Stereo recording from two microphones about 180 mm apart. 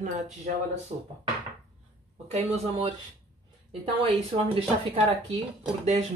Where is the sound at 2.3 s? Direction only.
35° right (ahead or behind).